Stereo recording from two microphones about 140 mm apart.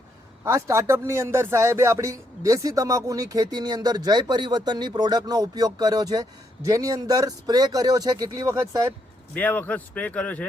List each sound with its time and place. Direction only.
0.4 s speech: 20° right (ahead or behind)
9.3 s speech: 10° left (ahead or behind)